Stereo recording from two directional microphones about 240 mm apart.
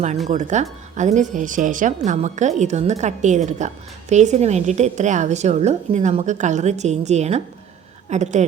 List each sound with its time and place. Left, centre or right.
0.3 s speech: right